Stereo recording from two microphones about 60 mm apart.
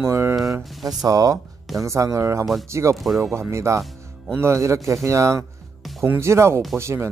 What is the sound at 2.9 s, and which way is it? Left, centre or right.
Speech, centre.